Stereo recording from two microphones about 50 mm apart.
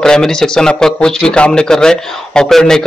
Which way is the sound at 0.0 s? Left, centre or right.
Centre.